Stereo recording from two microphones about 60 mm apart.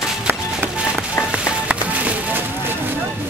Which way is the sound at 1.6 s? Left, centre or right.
Right.